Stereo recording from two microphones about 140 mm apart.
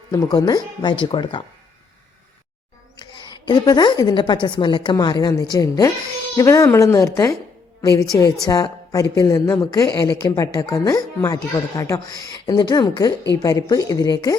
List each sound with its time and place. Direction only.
0.1 s a woman's voice: 25° left (ahead or behind)
3.0 s a woman's voice: 30° left (ahead or behind)